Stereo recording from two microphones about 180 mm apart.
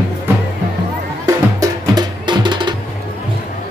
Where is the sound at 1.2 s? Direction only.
20° right (ahead or behind).